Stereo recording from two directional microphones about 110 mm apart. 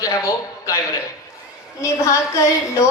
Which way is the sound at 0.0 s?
30° left (ahead or behind).